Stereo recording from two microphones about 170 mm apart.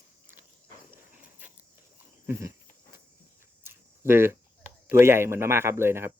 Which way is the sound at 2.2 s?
15° right (ahead or behind).